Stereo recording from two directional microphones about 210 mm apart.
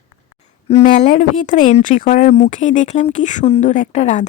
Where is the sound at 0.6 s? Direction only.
35° left (ahead or behind).